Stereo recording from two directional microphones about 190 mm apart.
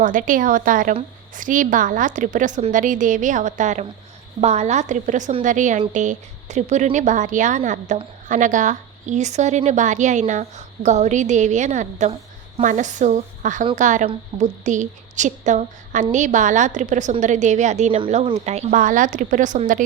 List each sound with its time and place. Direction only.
0.0 s a woman's voice: 45° right (ahead or behind)